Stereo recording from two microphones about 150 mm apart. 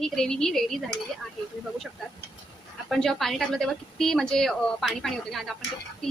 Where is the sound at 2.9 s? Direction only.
Centre (ahead or behind).